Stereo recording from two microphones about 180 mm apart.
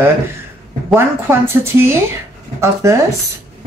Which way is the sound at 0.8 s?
15° right (ahead or behind).